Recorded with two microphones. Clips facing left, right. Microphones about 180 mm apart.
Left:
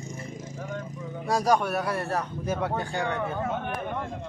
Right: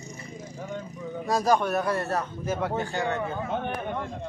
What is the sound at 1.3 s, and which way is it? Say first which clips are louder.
A man's voice: even; 10° left (ahead or behind).